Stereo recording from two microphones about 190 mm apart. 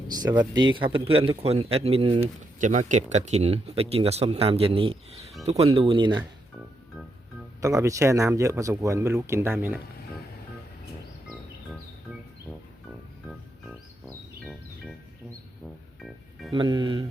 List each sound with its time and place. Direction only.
0.1 s speech: 20° right (ahead or behind)
2.6 s speech: 40° right (ahead or behind); by 6.2 s 25° right (ahead or behind)
7.6 s speech: 15° right (ahead or behind)
16.0 s music: centre (ahead or behind)
16.6 s speech: 25° right (ahead or behind)